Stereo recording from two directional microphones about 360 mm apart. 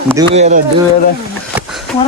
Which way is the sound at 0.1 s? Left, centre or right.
Centre.